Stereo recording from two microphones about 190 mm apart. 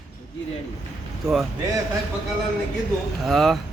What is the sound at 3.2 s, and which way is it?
Speech, centre (ahead or behind).